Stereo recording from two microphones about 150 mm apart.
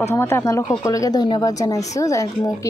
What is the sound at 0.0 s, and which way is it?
A woman's voice, 15° left (ahead or behind).